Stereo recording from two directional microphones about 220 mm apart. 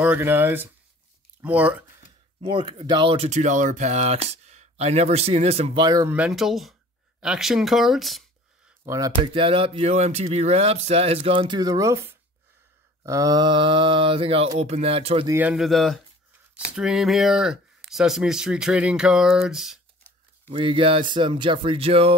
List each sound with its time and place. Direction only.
0.0 s speech: 10° right (ahead or behind)
2.4 s speech: 25° right (ahead or behind)
6.1 s speech: 5° right (ahead or behind)
8.8 s speech: 15° right (ahead or behind)
9.2 s speech: 25° right (ahead or behind)
15.2 s speech: 10° right (ahead or behind)
20.4 s speech: 25° right (ahead or behind)